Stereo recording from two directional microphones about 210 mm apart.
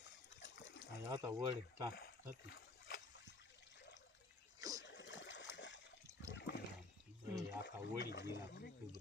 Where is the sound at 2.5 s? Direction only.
45° left (ahead or behind).